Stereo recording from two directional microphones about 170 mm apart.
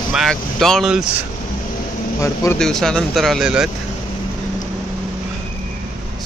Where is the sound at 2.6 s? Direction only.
5° left (ahead or behind).